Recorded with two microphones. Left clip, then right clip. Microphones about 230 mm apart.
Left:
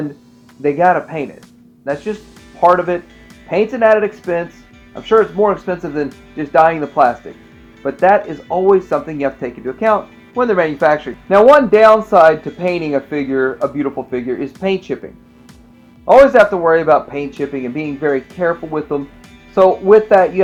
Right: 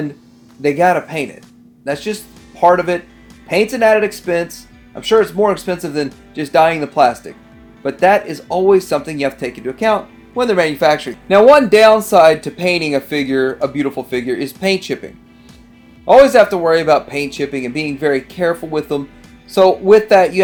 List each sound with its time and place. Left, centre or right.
0.6 s speech: right